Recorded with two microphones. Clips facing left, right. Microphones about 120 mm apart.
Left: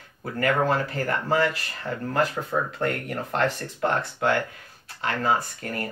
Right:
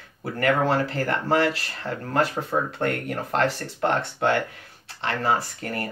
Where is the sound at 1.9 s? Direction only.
5° right (ahead or behind).